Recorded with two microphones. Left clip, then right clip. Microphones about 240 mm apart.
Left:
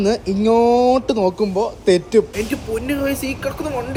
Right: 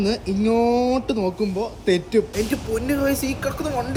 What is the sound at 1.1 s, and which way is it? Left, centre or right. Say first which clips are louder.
Speech: left 6 dB; left.